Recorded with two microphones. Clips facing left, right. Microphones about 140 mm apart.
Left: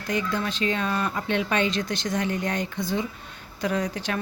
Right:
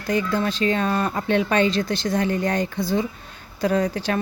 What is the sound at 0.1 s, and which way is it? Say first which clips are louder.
Speech: right 5 dB; 35° right (ahead or behind).